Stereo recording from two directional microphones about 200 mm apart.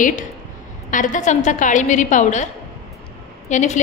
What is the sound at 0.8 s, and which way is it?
A woman's voice, 40° left (ahead or behind).